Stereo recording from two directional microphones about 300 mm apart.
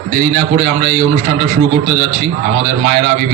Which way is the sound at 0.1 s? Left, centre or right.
Right.